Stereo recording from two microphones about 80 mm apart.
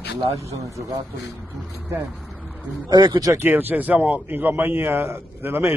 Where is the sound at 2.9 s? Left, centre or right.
Right.